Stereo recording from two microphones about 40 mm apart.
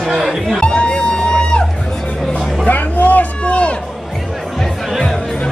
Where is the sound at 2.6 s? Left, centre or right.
Left.